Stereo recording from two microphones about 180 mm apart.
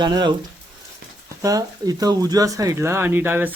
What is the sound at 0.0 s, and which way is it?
Speech, 25° right (ahead or behind).